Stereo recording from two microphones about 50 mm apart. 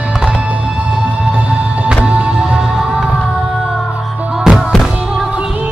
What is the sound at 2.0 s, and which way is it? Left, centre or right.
Music, right.